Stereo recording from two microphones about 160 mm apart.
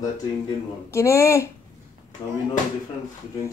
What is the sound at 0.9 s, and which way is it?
Speech, 20° left (ahead or behind).